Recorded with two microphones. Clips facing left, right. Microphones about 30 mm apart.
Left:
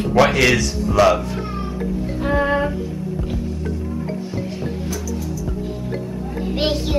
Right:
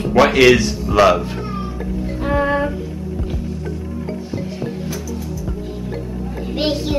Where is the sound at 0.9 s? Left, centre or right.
Right.